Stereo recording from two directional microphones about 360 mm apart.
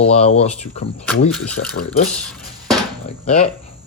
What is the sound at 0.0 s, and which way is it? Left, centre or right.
Speech, centre.